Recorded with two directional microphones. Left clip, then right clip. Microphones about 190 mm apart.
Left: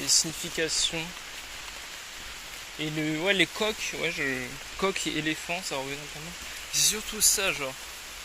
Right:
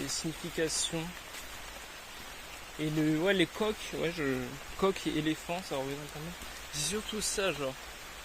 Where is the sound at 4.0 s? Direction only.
25° right (ahead or behind).